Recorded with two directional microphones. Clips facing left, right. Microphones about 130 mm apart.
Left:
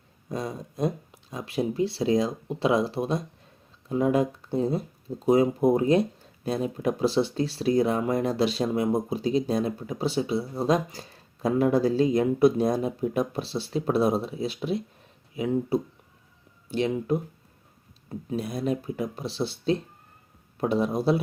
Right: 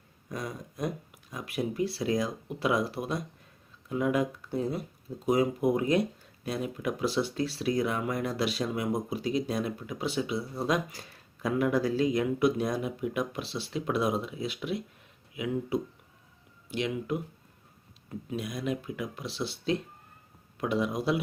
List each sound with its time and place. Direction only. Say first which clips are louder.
0.3 s speech: left 5 dB; 25° left (ahead or behind)